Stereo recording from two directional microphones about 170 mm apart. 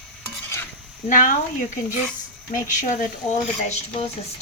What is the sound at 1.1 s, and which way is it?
Female singing, 50° left (ahead or behind).